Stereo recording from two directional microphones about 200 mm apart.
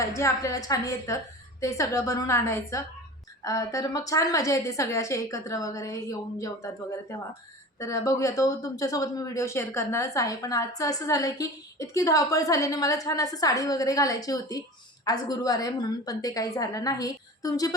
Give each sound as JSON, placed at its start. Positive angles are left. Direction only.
{"t": 0.0, "sound": "speech", "side_deg": 15}